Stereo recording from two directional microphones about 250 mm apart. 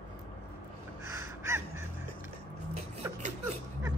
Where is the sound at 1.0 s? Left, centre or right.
Centre.